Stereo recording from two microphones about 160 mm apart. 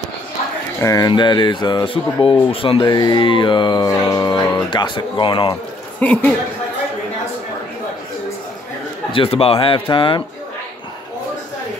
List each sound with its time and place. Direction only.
0.7 s speech: 20° left (ahead or behind)
5.9 s speech: 10° left (ahead or behind)
9.1 s speech: 35° left (ahead or behind)